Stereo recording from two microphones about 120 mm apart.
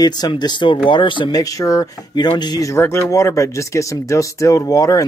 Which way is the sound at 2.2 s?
40° left (ahead or behind).